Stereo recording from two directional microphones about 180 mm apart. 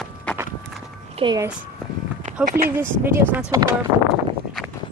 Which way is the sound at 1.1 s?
25° right (ahead or behind).